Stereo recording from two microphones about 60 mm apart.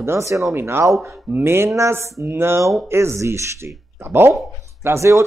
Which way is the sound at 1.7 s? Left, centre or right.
Right.